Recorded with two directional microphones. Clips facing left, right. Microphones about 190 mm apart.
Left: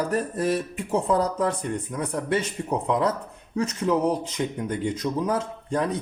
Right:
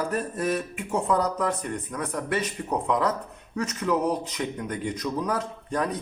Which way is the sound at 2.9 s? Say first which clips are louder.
Left 1 dB; 25° left (ahead or behind).